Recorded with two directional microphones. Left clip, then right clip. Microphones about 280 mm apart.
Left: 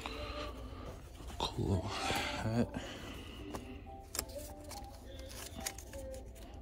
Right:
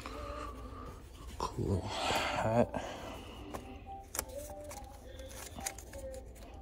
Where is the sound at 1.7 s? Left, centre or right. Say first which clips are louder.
Right 6 dB; centre.